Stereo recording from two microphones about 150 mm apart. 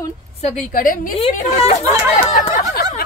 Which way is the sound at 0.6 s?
65° left (ahead or behind).